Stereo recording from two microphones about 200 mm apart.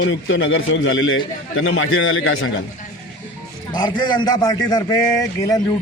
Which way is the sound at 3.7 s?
20° left (ahead or behind).